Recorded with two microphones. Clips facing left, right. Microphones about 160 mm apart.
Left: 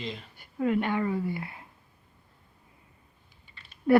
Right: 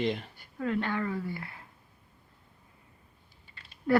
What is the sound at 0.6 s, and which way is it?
Speech, 15° left (ahead or behind).